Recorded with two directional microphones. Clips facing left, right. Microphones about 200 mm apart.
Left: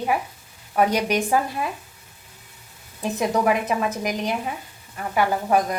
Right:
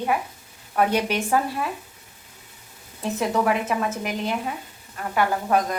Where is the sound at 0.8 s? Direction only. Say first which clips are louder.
Left 1 dB; 15° left (ahead or behind).